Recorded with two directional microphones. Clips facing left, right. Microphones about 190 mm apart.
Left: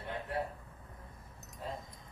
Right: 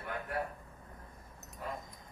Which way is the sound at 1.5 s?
25° left (ahead or behind).